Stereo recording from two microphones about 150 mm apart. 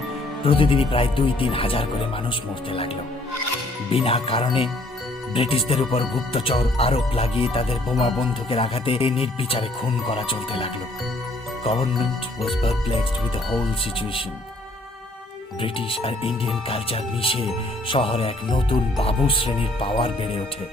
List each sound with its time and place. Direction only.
0.4 s speech: 35° left (ahead or behind)
3.9 s speech: 40° left (ahead or behind)
15.6 s speech: 40° left (ahead or behind)